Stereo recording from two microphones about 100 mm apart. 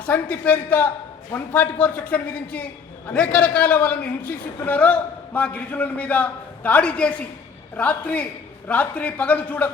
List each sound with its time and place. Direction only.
0.0 s a man's voice: 15° left (ahead or behind)